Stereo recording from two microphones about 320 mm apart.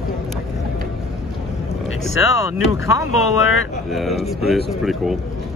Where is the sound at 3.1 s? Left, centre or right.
Left.